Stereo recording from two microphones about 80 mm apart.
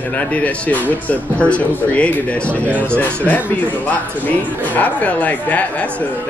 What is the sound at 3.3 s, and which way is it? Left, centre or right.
Speech, left.